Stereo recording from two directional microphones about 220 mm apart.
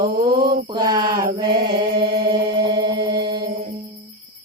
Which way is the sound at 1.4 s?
20° right (ahead or behind).